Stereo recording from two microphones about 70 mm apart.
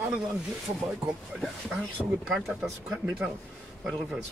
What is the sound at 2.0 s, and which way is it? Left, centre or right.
Speech, left.